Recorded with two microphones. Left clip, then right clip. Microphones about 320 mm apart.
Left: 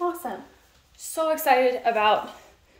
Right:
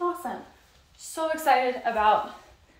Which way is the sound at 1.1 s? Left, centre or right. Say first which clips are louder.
Left 2 dB; left.